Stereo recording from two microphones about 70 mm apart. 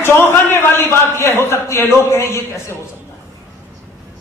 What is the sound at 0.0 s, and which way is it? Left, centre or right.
A man's voice, left.